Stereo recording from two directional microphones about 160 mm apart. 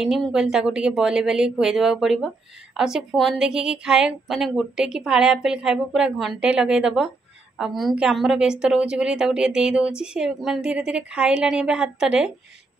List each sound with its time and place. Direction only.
0.0 s a woman's voice: centre (ahead or behind)